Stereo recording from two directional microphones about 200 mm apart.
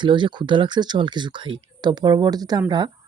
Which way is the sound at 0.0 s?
25° right (ahead or behind).